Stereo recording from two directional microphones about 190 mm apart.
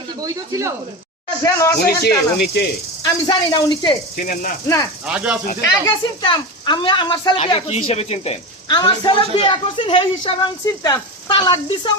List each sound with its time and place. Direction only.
0.2 s speech: 15° right (ahead or behind)
1.5 s speech: 15° left (ahead or behind)
1.8 s speech: 55° left (ahead or behind)
3.0 s speech: 20° left (ahead or behind)
4.1 s speech: 45° left (ahead or behind)
5.0 s speech: 5° right (ahead or behind)
5.6 s speech: 20° left (ahead or behind)